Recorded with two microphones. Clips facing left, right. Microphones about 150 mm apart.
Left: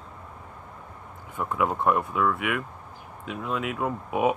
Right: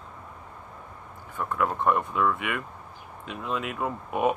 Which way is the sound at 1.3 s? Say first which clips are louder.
Left 1 dB; 10° left (ahead or behind).